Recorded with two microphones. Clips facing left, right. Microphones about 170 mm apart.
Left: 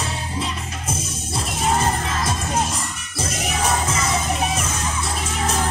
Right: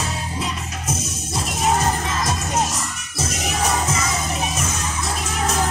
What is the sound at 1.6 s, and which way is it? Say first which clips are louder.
Music: right 1 dB; 30° left (ahead or behind).